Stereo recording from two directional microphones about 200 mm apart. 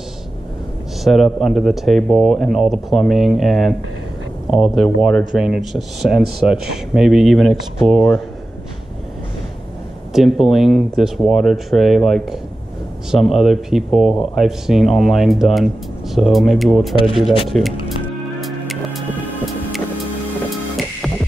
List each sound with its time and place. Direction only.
1.0 s speech: centre (ahead or behind)
10.1 s speech: centre (ahead or behind)
13.4 s speech: centre (ahead or behind)
18.4 s music: centre (ahead or behind)